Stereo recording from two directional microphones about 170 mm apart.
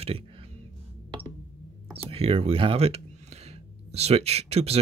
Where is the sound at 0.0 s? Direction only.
35° right (ahead or behind).